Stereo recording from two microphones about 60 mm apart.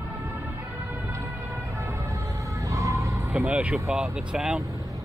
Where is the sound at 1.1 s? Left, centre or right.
Right.